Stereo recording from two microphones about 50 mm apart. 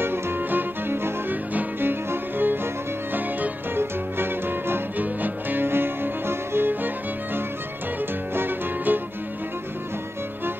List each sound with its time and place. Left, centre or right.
0.0 s music: right
4.9 s music: right
8.4 s music: right